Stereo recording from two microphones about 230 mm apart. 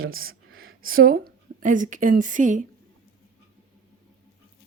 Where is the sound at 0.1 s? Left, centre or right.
Right.